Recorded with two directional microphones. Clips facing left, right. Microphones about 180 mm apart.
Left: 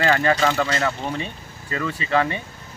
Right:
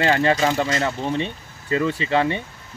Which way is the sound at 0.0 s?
25° right (ahead or behind).